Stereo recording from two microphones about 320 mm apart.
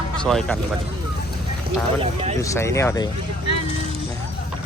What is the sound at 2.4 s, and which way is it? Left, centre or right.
Speech, centre.